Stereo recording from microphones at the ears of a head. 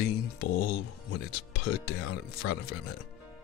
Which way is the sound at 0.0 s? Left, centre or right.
Left.